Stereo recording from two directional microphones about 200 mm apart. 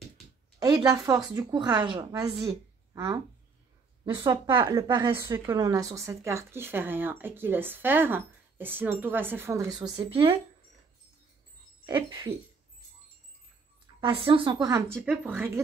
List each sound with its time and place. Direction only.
0.6 s a woman's voice: 20° right (ahead or behind)
11.8 s a woman's voice: 20° right (ahead or behind)
14.0 s a woman's voice: 25° right (ahead or behind)
15.0 s speech: 10° right (ahead or behind)